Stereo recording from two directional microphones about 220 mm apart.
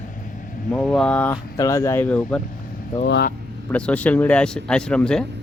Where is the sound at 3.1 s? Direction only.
50° left (ahead or behind).